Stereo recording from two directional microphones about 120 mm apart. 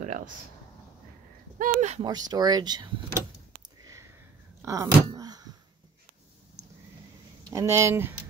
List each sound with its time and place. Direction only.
0.0 s a sound: 90° right
1.6 s speech: 90° right
2.0 s speech: 35° right (ahead or behind)
3.8 s sniff: 25° right (ahead or behind)
4.6 s a sound: 25° right (ahead or behind)
7.5 s speech: 25° right (ahead or behind)